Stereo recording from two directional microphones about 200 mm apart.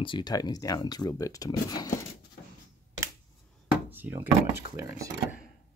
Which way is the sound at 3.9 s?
10° right (ahead or behind).